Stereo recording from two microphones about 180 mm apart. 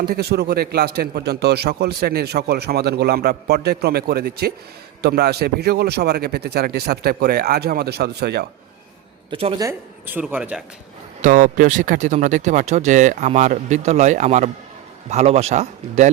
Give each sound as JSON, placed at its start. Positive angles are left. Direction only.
{"t": 0.0, "sound": "a man's voice", "side_deg": -60}
{"t": 9.3, "sound": "speech", "side_deg": -30}
{"t": 9.6, "sound": "speech", "side_deg": -15}
{"t": 11.2, "sound": "speech", "side_deg": -45}